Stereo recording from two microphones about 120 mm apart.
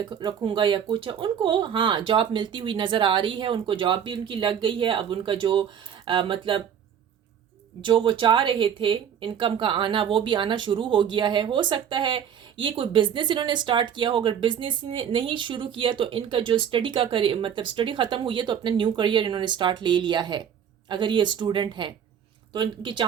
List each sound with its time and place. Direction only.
0.0 s speech: 35° right (ahead or behind)
7.9 s speech: 45° right (ahead or behind)